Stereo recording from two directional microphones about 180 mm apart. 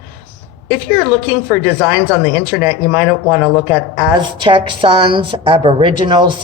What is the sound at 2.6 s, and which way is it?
Speech, 10° right (ahead or behind).